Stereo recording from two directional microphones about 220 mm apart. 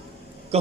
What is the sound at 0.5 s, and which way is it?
Speech, 30° right (ahead or behind).